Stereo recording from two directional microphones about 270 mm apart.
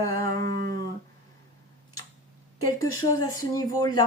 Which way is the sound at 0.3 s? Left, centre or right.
Right.